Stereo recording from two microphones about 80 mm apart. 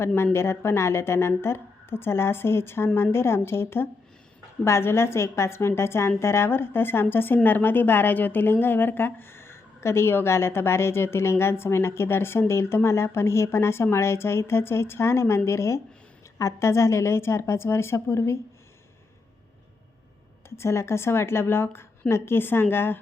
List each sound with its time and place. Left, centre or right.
0.3 s a woman's voice: left
20.6 s a woman's voice: left